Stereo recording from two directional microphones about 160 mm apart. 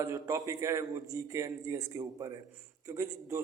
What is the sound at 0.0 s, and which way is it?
A man's voice, 20° right (ahead or behind).